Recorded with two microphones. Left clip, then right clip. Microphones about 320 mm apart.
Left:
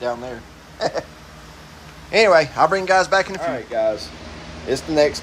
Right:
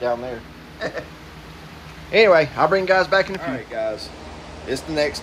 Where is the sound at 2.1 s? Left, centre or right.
Centre.